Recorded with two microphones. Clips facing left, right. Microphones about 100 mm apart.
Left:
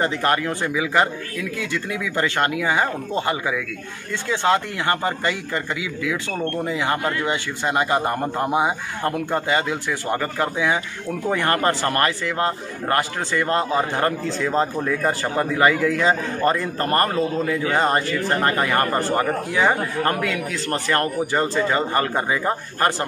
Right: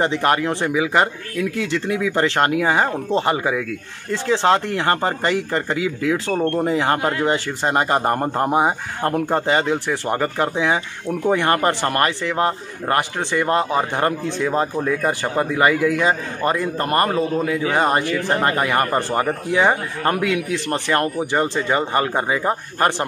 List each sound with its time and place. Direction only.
0.0 s a man's voice: 20° right (ahead or behind)